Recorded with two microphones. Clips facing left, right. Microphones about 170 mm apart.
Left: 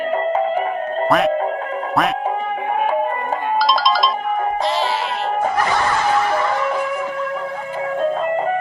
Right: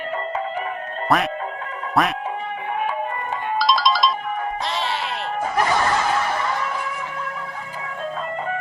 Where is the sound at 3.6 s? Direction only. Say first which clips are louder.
Left 1 dB; centre (ahead or behind).